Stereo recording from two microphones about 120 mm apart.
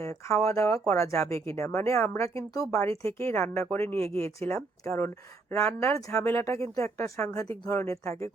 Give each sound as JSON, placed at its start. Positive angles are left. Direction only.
{"t": 0.0, "sound": "speech", "side_deg": 25}